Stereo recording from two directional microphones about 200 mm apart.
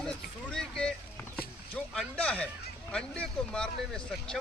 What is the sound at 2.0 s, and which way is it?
Speech, 5° left (ahead or behind).